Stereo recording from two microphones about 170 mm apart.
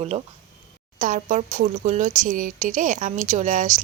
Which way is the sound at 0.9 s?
50° right (ahead or behind).